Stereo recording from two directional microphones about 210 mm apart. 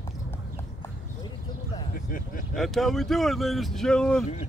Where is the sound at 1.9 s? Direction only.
40° left (ahead or behind).